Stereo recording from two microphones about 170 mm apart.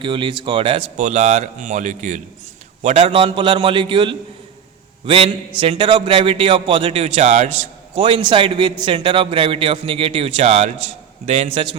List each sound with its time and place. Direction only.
0.0 s a man's voice: 30° right (ahead or behind)